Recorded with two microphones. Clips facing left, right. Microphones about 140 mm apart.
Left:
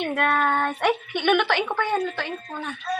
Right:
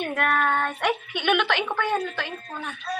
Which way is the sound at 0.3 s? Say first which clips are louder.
Left 1 dB; 15° left (ahead or behind).